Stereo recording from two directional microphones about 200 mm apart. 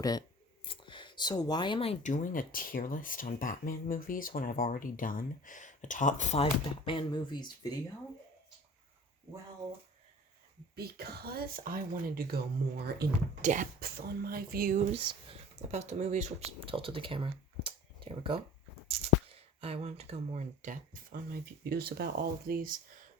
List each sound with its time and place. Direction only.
0.0 s speech: 20° left (ahead or behind)
10.8 s speech: 50° right (ahead or behind)
13.4 s speech: 40° right (ahead or behind)
14.9 s speech: 30° right (ahead or behind)
19.6 s speech: 30° right (ahead or behind); by 22.8 s 45° right (ahead or behind)